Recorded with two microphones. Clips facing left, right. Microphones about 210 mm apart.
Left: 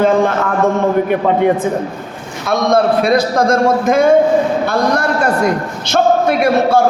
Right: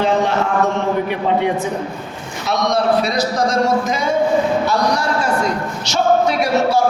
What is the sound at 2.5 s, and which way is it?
A man's voice, 55° left (ahead or behind).